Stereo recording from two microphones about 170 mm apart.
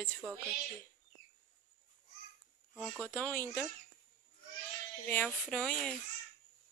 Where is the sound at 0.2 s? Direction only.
15° right (ahead or behind).